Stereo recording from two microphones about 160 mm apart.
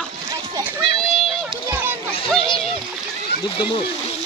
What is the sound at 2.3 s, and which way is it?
Splash, 35° left (ahead or behind).